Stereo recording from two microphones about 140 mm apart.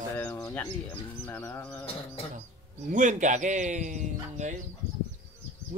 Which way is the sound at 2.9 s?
65° right (ahead or behind).